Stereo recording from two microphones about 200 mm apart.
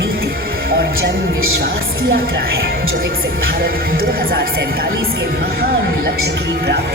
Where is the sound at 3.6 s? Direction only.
45° right (ahead or behind).